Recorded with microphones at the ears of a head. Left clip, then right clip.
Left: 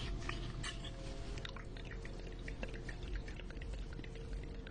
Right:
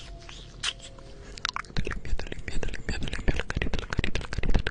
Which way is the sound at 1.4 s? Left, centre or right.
Right.